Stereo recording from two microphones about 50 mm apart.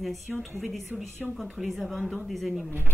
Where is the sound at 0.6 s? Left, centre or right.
Centre.